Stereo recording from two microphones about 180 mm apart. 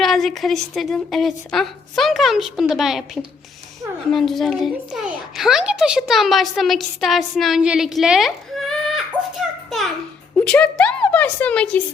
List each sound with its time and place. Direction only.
0.0 s a child's voice: centre (ahead or behind)